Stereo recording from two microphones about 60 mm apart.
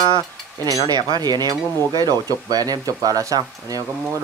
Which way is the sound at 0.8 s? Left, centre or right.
Right.